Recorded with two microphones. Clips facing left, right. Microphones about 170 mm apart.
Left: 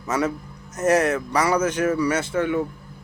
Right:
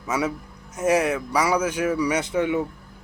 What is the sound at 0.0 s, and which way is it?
Speech, 10° right (ahead or behind).